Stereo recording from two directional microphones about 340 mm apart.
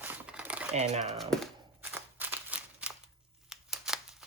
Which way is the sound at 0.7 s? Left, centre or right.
Centre.